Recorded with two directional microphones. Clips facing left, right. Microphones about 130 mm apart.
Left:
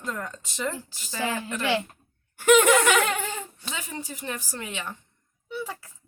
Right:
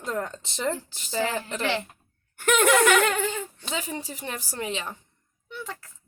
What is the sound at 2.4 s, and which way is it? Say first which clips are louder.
Speech: left 3 dB; 10° left (ahead or behind).